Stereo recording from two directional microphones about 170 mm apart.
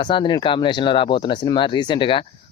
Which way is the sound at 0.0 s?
30° left (ahead or behind).